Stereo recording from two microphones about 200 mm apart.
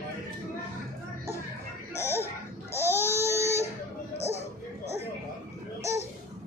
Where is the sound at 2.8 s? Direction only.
10° right (ahead or behind).